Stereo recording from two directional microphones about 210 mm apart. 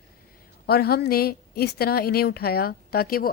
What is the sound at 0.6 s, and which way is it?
A woman's voice, 50° left (ahead or behind).